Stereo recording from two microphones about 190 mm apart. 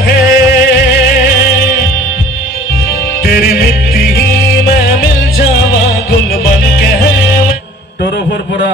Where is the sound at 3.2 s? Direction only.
55° left (ahead or behind).